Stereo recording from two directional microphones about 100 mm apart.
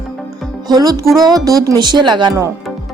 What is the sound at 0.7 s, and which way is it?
Speech, 40° right (ahead or behind).